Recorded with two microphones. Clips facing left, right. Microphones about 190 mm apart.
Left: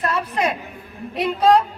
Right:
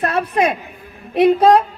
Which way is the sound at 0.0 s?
55° right (ahead or behind).